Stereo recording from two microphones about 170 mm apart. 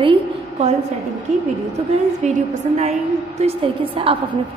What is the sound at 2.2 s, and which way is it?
A woman's voice, 45° right (ahead or behind).